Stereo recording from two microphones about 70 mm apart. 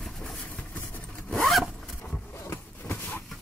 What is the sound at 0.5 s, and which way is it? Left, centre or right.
Zipper, left.